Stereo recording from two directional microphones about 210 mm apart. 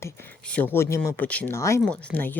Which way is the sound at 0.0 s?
5° left (ahead or behind).